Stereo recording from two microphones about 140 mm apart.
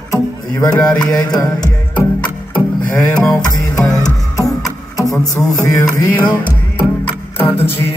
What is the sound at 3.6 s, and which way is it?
Music, 25° left (ahead or behind).